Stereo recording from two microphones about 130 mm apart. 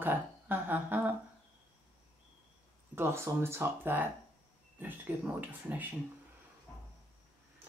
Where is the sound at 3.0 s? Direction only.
20° right (ahead or behind).